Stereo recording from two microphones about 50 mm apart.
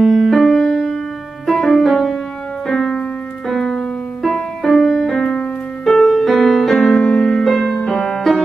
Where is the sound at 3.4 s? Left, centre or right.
Centre.